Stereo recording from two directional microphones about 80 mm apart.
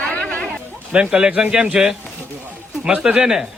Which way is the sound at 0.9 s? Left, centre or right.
Centre.